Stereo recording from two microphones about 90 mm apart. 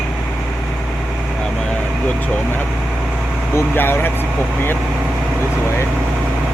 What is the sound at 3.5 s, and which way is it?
Speech, 25° left (ahead or behind).